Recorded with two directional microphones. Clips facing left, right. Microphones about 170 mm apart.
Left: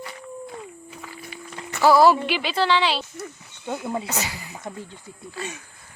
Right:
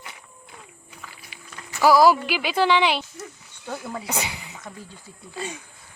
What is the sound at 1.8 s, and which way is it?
Speech, 10° right (ahead or behind).